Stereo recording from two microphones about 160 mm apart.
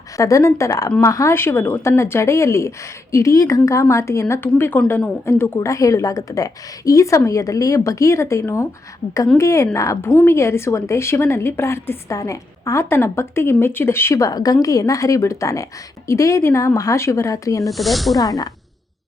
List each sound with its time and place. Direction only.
0.2 s a woman's voice: 20° left (ahead or behind)
17.7 s speech: centre (ahead or behind)
18.2 s speech: 20° left (ahead or behind)